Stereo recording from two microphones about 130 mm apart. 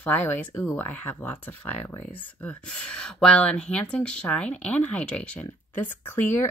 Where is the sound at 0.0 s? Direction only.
15° left (ahead or behind).